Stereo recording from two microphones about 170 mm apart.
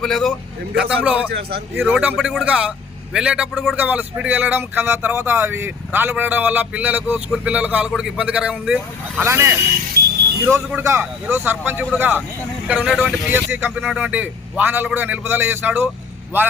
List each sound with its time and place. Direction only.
0.0 s a man's voice: centre (ahead or behind)
1.3 s a man's voice: 70° right (ahead or behind)
1.8 s a man's voice: 5° right (ahead or behind)
10.0 s vehicle: 65° right (ahead or behind)
10.4 s a man's voice: 10° right (ahead or behind)